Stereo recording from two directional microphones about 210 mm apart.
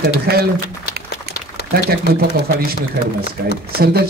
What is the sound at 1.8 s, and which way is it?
Speech, 50° right (ahead or behind).